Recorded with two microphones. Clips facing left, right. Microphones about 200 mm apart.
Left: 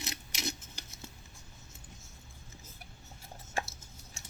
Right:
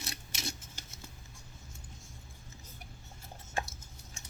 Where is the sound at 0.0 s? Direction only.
20° left (ahead or behind).